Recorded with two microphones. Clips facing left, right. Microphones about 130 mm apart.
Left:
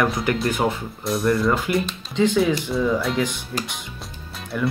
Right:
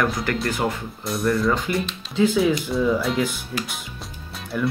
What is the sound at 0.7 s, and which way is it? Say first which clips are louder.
Speech: left 3 dB; centre (ahead or behind).